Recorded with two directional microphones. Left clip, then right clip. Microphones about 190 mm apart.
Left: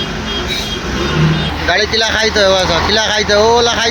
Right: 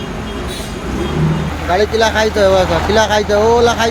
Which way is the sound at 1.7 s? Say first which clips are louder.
Right 2 dB; centre (ahead or behind).